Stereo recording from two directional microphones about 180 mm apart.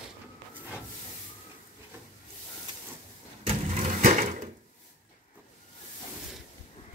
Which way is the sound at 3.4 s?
35° right (ahead or behind).